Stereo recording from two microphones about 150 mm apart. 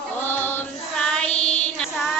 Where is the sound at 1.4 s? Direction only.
45° left (ahead or behind).